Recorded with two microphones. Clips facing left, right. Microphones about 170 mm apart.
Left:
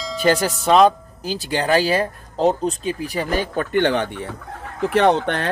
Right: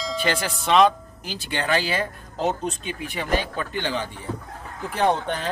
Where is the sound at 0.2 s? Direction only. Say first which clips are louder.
Left 10 dB; 40° left (ahead or behind); by 4.3 s 65° left (ahead or behind).